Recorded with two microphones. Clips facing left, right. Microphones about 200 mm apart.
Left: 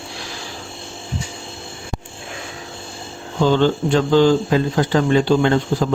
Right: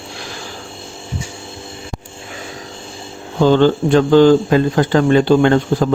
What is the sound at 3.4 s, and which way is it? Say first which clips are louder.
Speech: right 4 dB; 50° right (ahead or behind).